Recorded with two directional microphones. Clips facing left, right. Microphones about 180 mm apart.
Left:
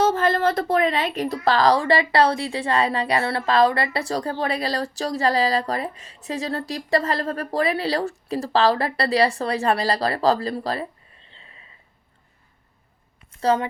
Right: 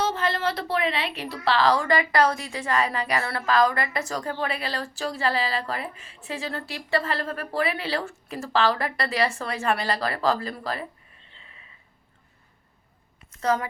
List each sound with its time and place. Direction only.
0.0 s a woman's voice: 50° left (ahead or behind)
13.3 s a woman's voice: 30° left (ahead or behind)